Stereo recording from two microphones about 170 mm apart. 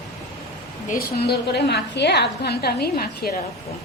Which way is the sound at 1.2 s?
80° left.